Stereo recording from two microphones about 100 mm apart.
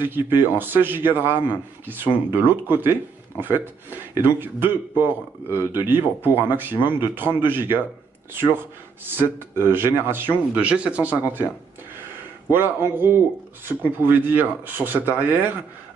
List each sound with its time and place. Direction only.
0.0 s speech: 20° right (ahead or behind)
9.0 s speech: 20° right (ahead or behind)
12.4 s speech: 20° right (ahead or behind)